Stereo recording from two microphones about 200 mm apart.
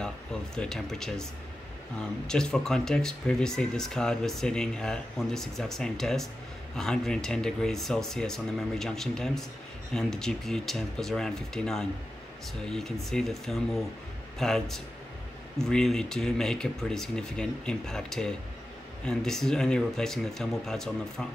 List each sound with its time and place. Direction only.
0.0 s speech: 5° left (ahead or behind)